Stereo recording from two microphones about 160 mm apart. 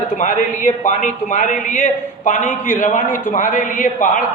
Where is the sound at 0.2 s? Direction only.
50° left (ahead or behind).